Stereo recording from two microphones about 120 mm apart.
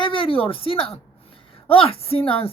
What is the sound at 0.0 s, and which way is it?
A woman's voice, 45° left (ahead or behind).